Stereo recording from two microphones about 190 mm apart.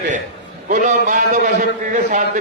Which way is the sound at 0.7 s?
45° right (ahead or behind).